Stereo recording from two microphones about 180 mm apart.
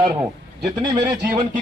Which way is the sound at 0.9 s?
25° right (ahead or behind).